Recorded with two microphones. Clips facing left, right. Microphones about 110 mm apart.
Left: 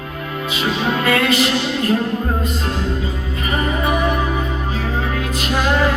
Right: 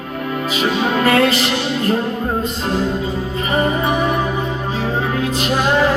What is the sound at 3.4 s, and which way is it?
Music, 30° right (ahead or behind).